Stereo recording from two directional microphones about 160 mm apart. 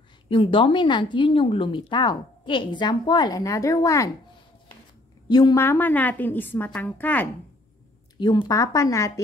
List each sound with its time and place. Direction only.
0.3 s speech: 35° left (ahead or behind)
5.3 s a woman's voice: 25° left (ahead or behind)
8.2 s speech: 25° left (ahead or behind)